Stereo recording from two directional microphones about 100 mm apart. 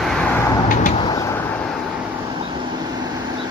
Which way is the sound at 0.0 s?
5° left (ahead or behind).